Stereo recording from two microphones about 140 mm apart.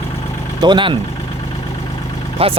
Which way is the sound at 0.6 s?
35° right (ahead or behind).